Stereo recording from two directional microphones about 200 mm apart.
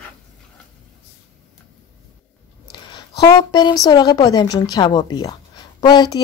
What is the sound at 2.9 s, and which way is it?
Speech, 20° left (ahead or behind).